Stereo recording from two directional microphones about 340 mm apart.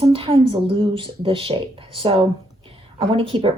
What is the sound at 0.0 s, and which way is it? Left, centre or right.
Speech, centre.